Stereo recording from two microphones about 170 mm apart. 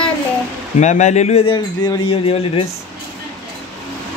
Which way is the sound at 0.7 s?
45° left (ahead or behind).